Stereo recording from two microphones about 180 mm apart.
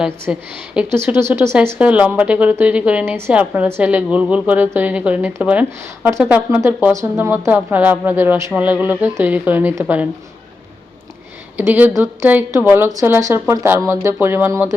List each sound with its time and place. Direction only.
0.0 s a woman's voice: 5° right (ahead or behind)
11.5 s a woman's voice: 10° right (ahead or behind)